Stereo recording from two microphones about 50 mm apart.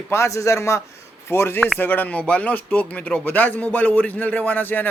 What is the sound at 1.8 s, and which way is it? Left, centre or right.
Speech, left.